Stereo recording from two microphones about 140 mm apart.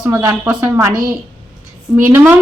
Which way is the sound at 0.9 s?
80° right.